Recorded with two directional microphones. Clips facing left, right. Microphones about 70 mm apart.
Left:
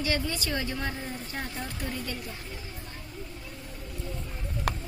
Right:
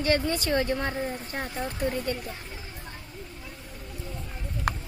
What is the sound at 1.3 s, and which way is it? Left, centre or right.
Speech, right.